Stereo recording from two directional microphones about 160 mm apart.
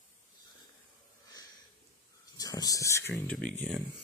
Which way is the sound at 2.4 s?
20° left (ahead or behind).